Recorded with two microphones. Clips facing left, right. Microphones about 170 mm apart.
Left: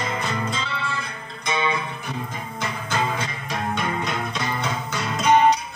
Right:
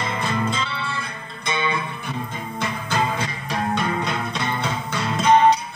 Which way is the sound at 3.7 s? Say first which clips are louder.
Right 2 dB; 30° right (ahead or behind).